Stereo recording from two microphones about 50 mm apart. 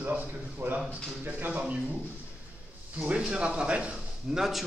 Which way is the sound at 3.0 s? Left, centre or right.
Right.